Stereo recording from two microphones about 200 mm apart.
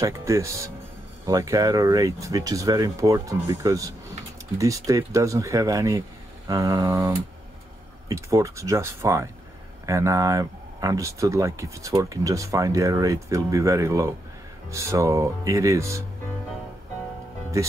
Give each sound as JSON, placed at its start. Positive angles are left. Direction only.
{"t": 0.0, "sound": "speech", "side_deg": -15}